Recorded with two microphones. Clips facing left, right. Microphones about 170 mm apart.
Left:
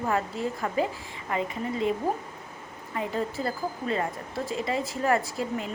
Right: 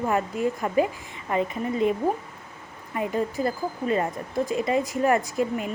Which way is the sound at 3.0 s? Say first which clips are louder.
Right 4 dB; 15° right (ahead or behind).